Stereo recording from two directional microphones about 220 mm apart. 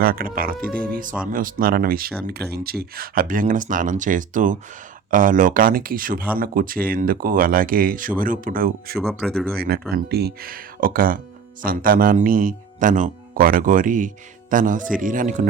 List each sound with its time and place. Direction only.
0.0 s speech: 40° right (ahead or behind)
9.0 s speech: centre (ahead or behind)
9.6 s speech: 45° right (ahead or behind)